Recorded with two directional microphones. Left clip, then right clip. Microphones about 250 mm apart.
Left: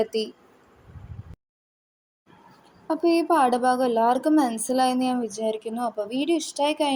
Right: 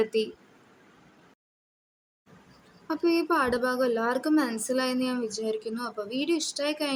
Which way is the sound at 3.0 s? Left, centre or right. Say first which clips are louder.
Left 5 dB; centre.